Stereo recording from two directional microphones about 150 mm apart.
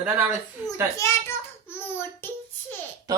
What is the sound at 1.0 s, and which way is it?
Speech, 20° left (ahead or behind).